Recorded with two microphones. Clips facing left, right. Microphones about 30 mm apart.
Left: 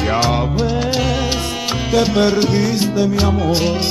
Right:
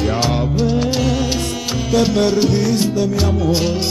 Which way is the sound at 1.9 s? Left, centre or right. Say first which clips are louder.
Even; centre.